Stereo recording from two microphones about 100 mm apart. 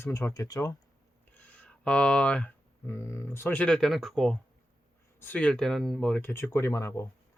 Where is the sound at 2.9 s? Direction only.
25° left (ahead or behind); by 4.3 s centre (ahead or behind).